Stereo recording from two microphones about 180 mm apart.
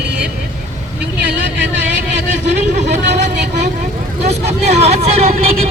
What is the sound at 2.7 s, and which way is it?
Vehicle, 40° right (ahead or behind).